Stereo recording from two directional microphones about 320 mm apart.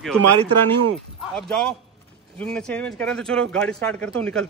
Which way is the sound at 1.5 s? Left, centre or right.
Centre.